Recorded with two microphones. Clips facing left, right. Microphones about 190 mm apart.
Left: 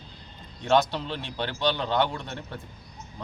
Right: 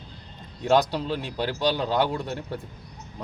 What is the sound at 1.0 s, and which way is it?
Speech, 5° right (ahead or behind).